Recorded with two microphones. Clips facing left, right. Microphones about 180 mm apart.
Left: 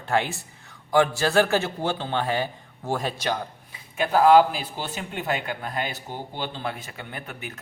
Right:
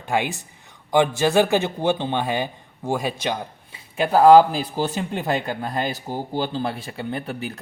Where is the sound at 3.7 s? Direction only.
35° right (ahead or behind).